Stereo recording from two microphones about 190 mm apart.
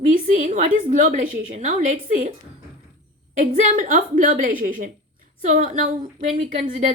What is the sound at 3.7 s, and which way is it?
A woman's voice, 45° right (ahead or behind).